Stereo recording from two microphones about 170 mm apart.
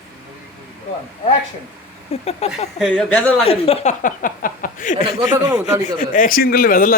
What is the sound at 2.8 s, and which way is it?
Speech, centre (ahead or behind).